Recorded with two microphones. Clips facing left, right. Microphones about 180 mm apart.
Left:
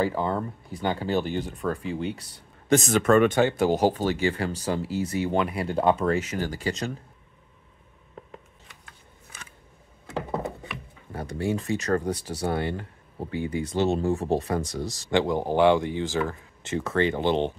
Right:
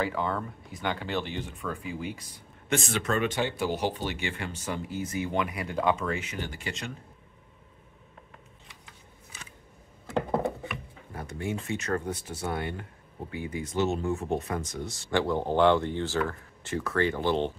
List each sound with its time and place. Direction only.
0.0 s speech: 35° left (ahead or behind)
11.1 s speech: 35° left (ahead or behind)
15.0 s speech: 15° left (ahead or behind)